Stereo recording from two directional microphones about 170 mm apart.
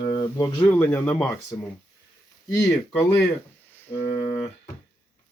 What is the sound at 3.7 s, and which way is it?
Music, 10° left (ahead or behind).